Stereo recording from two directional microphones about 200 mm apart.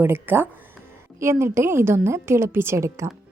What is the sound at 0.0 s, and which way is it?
A woman's voice, 10° right (ahead or behind).